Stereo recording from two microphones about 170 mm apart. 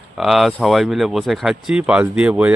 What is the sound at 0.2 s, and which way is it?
Speech, centre (ahead or behind).